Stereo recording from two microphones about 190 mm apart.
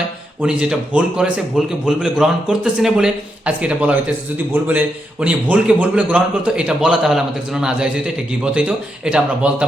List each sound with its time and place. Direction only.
0.6 s a man's voice: 5° right (ahead or behind)